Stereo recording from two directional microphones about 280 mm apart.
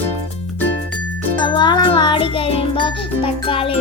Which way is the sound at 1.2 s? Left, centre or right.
Centre.